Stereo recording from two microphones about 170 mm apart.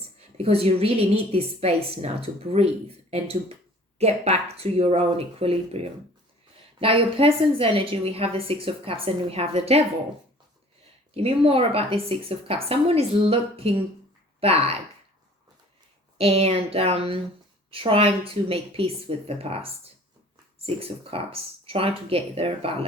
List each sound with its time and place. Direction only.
0.2 s a woman's voice: 35° right (ahead or behind)
11.1 s a woman's voice: 35° right (ahead or behind)
16.1 s a woman's voice: 35° right (ahead or behind)